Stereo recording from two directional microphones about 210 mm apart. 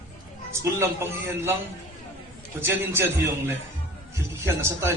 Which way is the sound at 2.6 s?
10° right (ahead or behind).